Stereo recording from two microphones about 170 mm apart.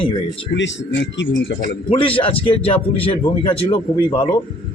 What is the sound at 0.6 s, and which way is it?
Speech, 90° left.